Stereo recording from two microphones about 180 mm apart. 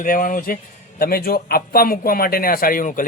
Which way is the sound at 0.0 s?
50° left (ahead or behind).